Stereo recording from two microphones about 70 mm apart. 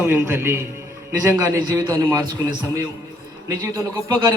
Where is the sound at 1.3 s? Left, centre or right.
Right.